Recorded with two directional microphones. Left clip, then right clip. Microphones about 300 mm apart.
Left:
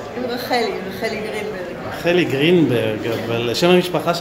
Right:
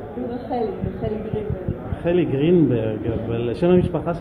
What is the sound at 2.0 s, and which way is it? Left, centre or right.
Speech, centre.